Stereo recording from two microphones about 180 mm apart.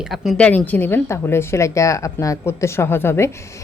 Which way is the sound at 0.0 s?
Centre (ahead or behind).